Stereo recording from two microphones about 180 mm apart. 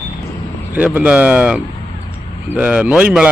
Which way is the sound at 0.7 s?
10° right (ahead or behind).